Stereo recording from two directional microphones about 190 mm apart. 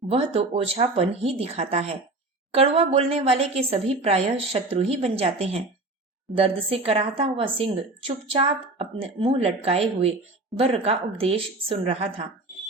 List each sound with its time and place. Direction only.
0.1 s a woman's voice: 30° right (ahead or behind)